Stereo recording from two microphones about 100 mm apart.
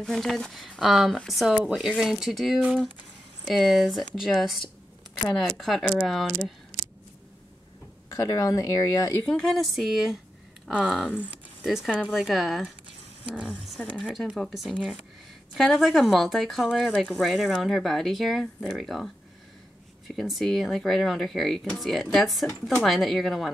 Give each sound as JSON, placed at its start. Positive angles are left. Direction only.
{"t": 0.0, "sound": "speech", "side_deg": 0}
{"t": 8.1, "sound": "speech", "side_deg": 35}
{"t": 9.2, "sound": "speech", "side_deg": 5}
{"t": 20.2, "sound": "speech", "side_deg": 0}